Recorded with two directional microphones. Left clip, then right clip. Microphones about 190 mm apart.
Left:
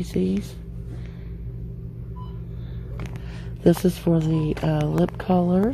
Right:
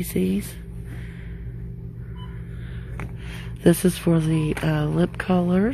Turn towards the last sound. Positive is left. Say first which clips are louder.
# left 1 dB
turn(degrees=-5)  # may be behind; listen again after turning